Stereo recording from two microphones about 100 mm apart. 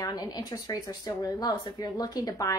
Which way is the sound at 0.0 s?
40° left (ahead or behind).